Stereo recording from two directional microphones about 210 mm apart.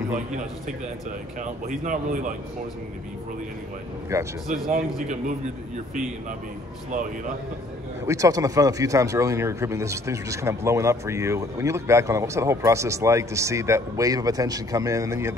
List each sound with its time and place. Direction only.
0.1 s a man's voice: 35° right (ahead or behind)
4.1 s a man's voice: 15° right (ahead or behind)
4.6 s speech: 40° right (ahead or behind)
6.9 s speech: 40° right (ahead or behind)
8.1 s a man's voice: 15° right (ahead or behind)